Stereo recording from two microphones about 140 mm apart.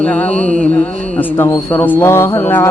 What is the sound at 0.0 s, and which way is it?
Speech, 10° left (ahead or behind).